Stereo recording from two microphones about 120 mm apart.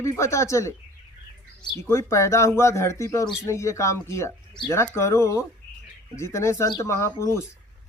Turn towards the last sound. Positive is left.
turn(degrees=25)  # may be behind; listen again after turning